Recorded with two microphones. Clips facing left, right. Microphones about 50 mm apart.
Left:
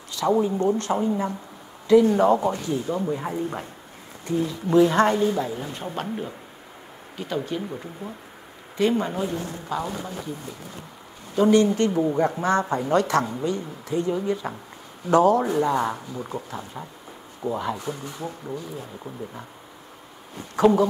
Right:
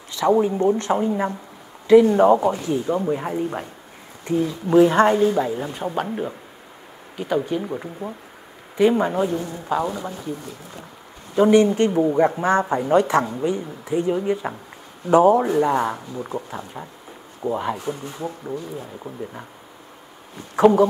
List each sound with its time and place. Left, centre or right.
0.1 s speech: right
2.1 s speech: centre
11.3 s speech: right
18.1 s speech: centre
20.5 s speech: right